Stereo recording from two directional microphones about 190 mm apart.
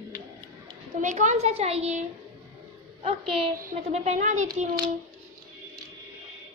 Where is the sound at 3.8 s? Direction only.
35° right (ahead or behind).